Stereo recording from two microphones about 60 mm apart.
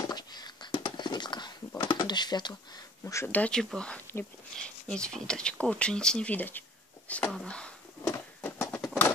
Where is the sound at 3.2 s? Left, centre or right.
Left.